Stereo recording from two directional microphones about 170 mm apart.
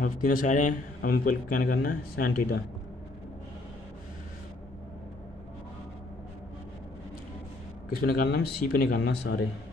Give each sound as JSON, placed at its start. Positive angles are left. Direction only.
{"t": 0.0, "sound": "a man's voice", "side_deg": 55}
{"t": 7.9, "sound": "a man's voice", "side_deg": 60}